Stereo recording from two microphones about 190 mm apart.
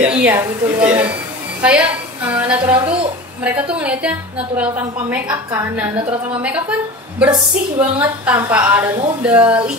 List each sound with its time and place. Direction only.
0.0 s a woman's voice: 10° right (ahead or behind)
2.7 s a woman's voice: 30° right (ahead or behind)
3.4 s a woman's voice: 5° right (ahead or behind)
7.2 s a woman's voice: 5° right (ahead or behind)